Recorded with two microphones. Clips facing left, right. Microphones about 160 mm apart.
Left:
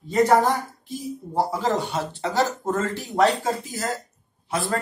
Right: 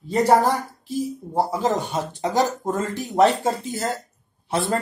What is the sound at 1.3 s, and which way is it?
Speech, 20° right (ahead or behind).